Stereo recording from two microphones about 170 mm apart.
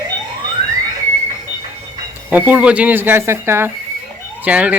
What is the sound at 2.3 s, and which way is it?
Speech, 10° right (ahead or behind).